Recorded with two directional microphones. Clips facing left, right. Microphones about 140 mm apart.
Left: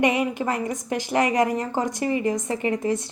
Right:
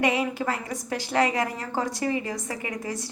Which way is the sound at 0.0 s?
20° left (ahead or behind).